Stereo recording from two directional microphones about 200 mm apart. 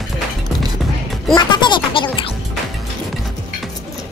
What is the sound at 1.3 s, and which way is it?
Speech, 20° left (ahead or behind).